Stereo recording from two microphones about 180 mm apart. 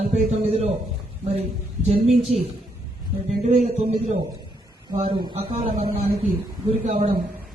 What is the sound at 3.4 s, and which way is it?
Speech, 35° right (ahead or behind).